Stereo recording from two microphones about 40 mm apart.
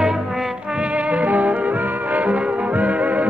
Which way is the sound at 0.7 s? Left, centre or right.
Right.